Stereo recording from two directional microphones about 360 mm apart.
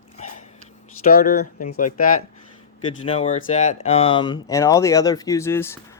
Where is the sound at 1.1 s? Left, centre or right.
Left; by 5.7 s centre.